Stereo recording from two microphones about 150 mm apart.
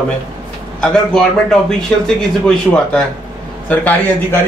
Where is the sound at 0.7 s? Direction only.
5° left (ahead or behind).